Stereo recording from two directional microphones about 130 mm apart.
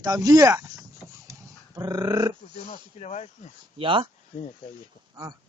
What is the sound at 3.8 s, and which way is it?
Speech, 40° right (ahead or behind).